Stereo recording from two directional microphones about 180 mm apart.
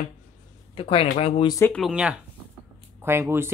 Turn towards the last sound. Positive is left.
turn(degrees=-15)  # may be behind; listen again after turning